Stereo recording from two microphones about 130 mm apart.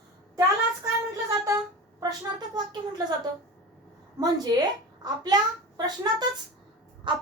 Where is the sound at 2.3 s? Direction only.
30° right (ahead or behind).